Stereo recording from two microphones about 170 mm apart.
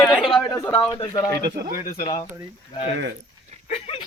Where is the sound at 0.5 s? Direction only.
20° left (ahead or behind).